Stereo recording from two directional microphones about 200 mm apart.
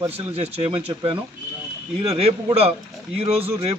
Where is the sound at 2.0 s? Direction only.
30° right (ahead or behind).